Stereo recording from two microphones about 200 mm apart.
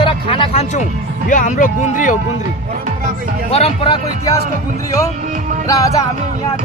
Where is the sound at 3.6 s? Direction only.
25° left (ahead or behind).